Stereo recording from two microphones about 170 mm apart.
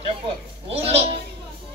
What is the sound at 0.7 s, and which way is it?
Speech, 35° right (ahead or behind).